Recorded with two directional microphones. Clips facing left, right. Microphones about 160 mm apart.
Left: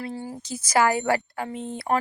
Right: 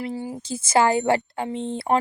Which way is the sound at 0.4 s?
25° right (ahead or behind).